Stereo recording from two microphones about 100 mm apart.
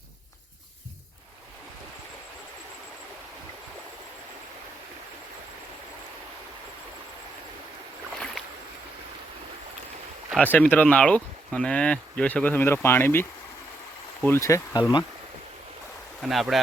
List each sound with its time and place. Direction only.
10.4 s speech: 15° left (ahead or behind)
14.3 s speech: 30° left (ahead or behind)
14.8 s speech: 45° left (ahead or behind)
16.2 s speech: centre (ahead or behind)